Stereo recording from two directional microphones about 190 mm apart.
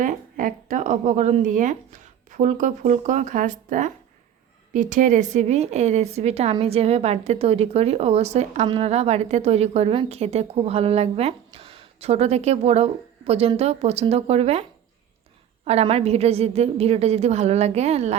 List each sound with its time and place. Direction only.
0.0 s a woman's voice: 45° right (ahead or behind)